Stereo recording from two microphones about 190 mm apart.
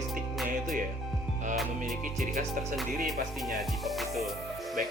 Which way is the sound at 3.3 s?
Centre (ahead or behind).